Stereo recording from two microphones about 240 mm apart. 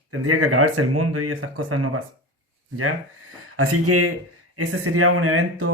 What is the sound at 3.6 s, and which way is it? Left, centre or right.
Speech, right.